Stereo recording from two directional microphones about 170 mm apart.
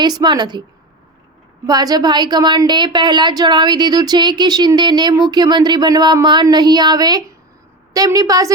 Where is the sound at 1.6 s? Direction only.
20° right (ahead or behind).